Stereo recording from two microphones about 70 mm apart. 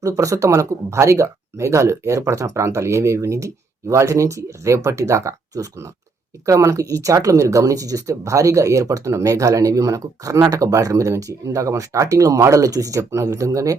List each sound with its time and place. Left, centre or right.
0.0 s speech: right
13.0 s speech: right